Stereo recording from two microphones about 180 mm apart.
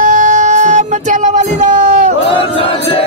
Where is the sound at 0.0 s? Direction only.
45° right (ahead or behind).